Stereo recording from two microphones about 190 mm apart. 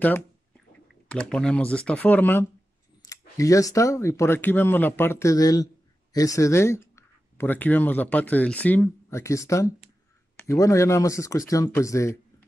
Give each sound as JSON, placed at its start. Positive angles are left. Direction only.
{"t": 1.1, "sound": "speech", "side_deg": 5}